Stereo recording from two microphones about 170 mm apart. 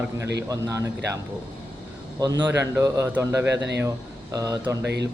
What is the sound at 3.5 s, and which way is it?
Speech, 90° right.